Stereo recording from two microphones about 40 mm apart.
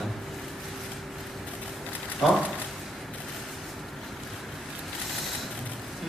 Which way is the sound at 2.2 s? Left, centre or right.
Centre.